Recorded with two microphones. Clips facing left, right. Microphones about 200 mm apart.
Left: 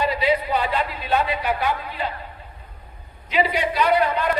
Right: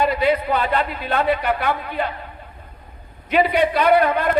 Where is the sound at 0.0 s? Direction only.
55° right (ahead or behind).